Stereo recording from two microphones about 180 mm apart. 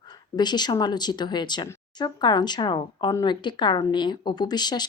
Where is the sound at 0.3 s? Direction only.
25° left (ahead or behind).